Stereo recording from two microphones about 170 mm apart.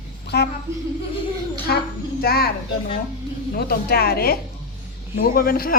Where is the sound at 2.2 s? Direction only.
65° left (ahead or behind).